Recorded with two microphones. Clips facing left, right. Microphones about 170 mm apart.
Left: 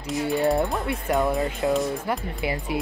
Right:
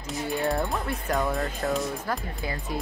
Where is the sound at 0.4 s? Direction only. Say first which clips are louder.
Left 5 dB; 20° left (ahead or behind).